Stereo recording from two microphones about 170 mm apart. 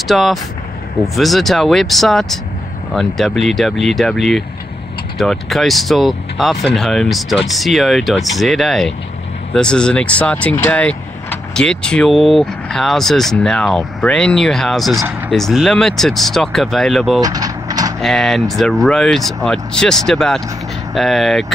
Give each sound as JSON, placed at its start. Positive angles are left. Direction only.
{"t": 0.1, "sound": "speech", "side_deg": 0}
{"t": 15.0, "sound": "speech", "side_deg": -10}
{"t": 15.3, "sound": "speech", "side_deg": 0}
{"t": 17.2, "sound": "mechanisms", "side_deg": -20}
{"t": 18.0, "sound": "speech", "side_deg": 0}